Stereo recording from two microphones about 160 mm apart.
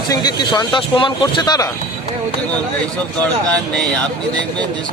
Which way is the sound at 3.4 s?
5° left (ahead or behind).